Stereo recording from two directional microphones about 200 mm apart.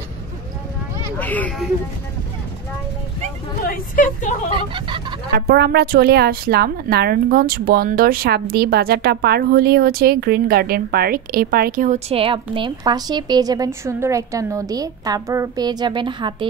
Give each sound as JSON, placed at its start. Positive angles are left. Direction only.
{"t": 1.1, "sound": "speech", "side_deg": 10}
{"t": 3.6, "sound": "speech", "side_deg": 45}
{"t": 4.5, "sound": "speech", "side_deg": -25}
{"t": 5.3, "sound": "a woman's voice", "side_deg": -50}